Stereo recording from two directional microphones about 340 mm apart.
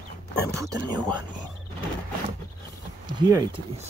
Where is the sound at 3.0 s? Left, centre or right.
Centre.